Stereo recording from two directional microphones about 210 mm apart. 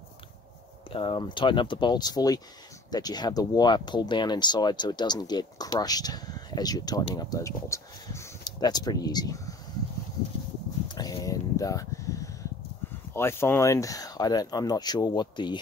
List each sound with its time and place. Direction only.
0.8 s speech: 25° left (ahead or behind)
11.0 s a sound: 15° left (ahead or behind)
13.1 s speech: 10° left (ahead or behind)